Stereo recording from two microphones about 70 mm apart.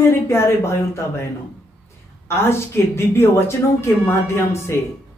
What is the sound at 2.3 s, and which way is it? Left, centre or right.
Speech, left.